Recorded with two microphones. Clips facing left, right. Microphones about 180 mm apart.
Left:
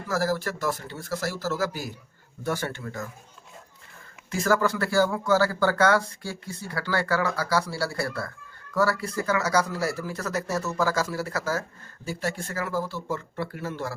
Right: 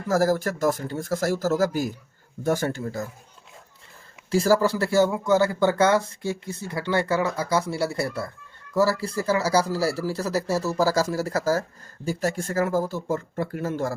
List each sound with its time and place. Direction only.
0.1 s speech: 45° right (ahead or behind)
4.3 s speech: 30° right (ahead or behind)